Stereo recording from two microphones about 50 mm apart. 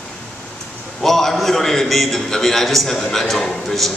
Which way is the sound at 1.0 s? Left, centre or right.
Centre.